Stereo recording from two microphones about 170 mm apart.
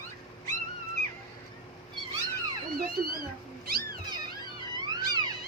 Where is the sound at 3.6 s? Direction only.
60° right (ahead or behind).